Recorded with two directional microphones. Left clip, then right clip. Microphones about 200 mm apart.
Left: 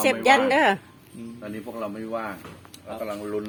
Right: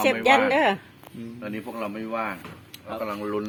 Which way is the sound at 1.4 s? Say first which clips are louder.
Right 1 dB; 40° right (ahead or behind).